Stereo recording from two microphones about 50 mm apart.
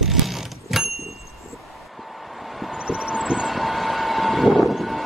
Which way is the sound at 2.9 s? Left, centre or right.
Right.